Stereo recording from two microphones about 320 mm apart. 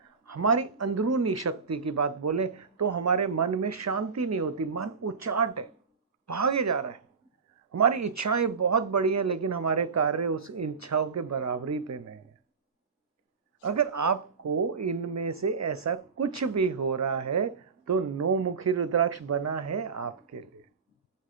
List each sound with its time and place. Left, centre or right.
0.3 s speech: right
13.6 s speech: right